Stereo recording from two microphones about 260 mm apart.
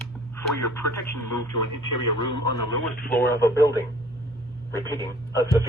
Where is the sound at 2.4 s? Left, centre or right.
Right.